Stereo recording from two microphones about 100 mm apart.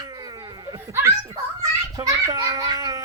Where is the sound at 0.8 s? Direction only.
25° right (ahead or behind).